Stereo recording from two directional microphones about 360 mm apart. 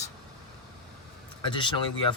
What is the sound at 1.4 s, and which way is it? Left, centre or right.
Speech, centre.